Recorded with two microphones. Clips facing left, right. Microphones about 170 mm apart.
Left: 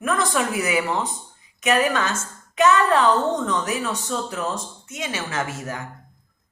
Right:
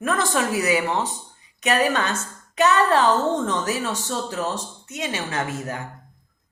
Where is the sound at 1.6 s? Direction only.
35° right (ahead or behind).